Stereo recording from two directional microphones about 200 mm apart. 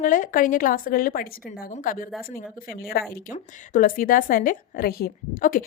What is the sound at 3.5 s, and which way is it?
A woman's voice, 40° left (ahead or behind).